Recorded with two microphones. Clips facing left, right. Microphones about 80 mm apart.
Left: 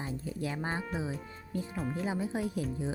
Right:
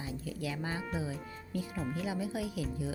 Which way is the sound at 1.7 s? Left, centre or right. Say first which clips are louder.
Left 2 dB; centre.